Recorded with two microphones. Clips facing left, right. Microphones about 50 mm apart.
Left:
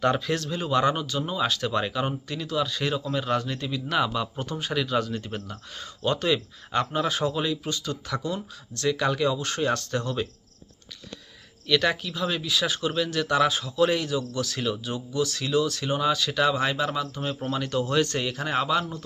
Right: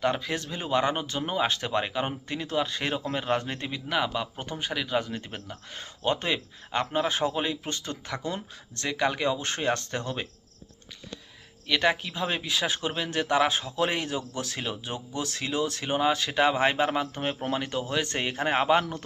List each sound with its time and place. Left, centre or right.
0.0 s speech: centre
1.0 s speech: right
3.8 s speech: centre
11.7 s speech: right
17.6 s speech: right
18.0 s a man's voice: right